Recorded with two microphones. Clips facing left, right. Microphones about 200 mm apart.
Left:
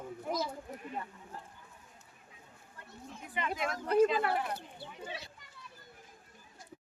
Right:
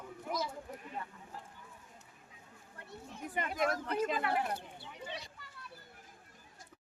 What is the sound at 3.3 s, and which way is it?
Speech, 45° right (ahead or behind).